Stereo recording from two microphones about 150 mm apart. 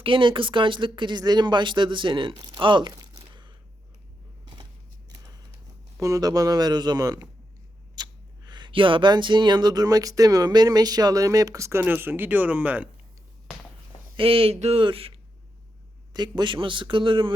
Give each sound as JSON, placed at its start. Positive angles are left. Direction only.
{"t": 0.0, "sound": "speech", "side_deg": -35}
{"t": 6.0, "sound": "speech", "side_deg": -25}
{"t": 14.2, "sound": "speech", "side_deg": -35}